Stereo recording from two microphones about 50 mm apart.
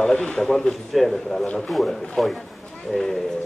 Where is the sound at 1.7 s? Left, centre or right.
Centre.